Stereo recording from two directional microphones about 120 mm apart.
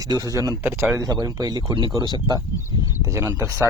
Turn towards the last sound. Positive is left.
turn(degrees=-25)  # may be behind; listen again after turning